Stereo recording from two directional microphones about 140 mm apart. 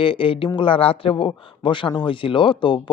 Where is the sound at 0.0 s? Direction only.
40° left (ahead or behind).